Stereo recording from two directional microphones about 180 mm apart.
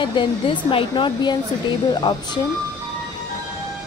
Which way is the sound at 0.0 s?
25° left (ahead or behind).